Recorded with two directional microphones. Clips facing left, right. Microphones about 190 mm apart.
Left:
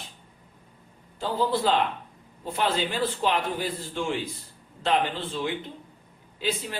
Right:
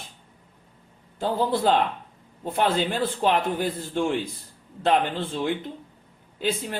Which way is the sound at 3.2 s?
55° right (ahead or behind).